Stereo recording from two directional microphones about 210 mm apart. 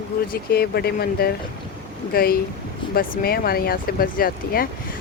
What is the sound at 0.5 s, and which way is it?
Speech, 50° left (ahead or behind).